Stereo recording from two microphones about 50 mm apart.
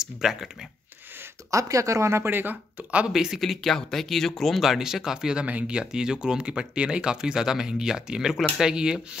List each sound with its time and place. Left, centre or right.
0.0 s speech: centre
1.5 s speech: right
2.2 s speech: right
3.1 s speech: centre